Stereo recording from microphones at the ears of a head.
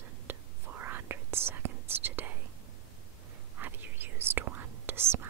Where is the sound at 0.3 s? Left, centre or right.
Right.